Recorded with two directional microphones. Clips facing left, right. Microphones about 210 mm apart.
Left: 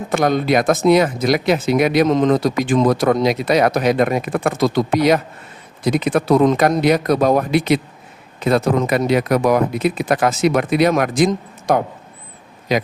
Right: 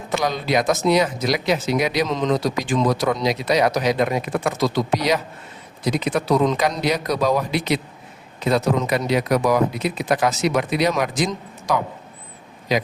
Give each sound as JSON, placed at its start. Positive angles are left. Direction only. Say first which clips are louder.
{"t": 0.1, "sound": "speech", "louder": "left 5 dB", "side_deg": 55}